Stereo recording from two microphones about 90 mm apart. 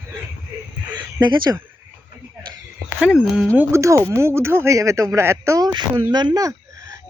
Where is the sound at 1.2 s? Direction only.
50° right (ahead or behind).